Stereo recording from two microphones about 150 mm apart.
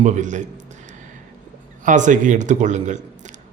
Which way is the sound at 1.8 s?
55° right (ahead or behind).